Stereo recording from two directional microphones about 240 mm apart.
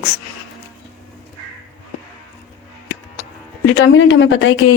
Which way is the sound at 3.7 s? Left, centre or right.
Left.